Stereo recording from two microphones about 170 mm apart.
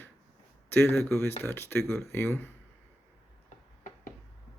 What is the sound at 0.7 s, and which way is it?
Speech, 15° left (ahead or behind).